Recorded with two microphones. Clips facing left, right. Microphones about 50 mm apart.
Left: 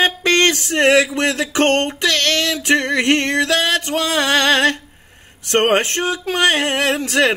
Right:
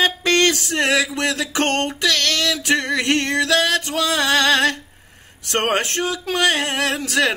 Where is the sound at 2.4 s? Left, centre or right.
Centre.